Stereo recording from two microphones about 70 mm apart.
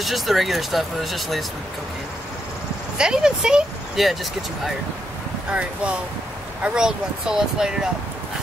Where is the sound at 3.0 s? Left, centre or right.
Centre.